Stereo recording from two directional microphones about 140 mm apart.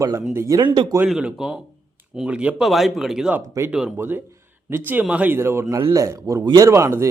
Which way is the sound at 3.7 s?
5° right (ahead or behind).